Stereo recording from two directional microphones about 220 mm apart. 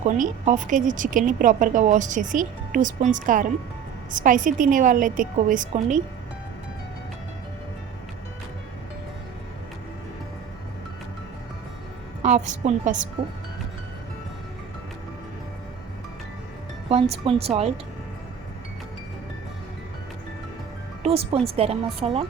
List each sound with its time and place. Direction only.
0.0 s a woman's voice: 35° right (ahead or behind)
12.2 s a woman's voice: 30° right (ahead or behind)
16.9 s a woman's voice: 25° right (ahead or behind)
21.0 s a woman's voice: 25° right (ahead or behind)